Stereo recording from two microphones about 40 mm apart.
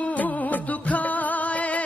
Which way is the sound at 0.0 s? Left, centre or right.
Left.